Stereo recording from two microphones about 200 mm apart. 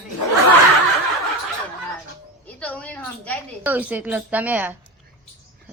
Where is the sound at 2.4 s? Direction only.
5° left (ahead or behind).